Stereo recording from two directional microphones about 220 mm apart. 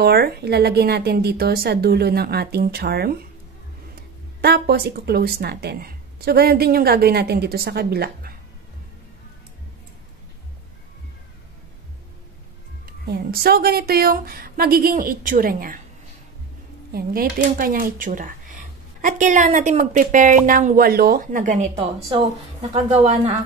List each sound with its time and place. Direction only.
0.0 s speech: 45° right (ahead or behind)
4.4 s speech: 45° right (ahead or behind)
12.8 s speech: 45° right (ahead or behind)
16.9 s a woman's voice: 40° right (ahead or behind)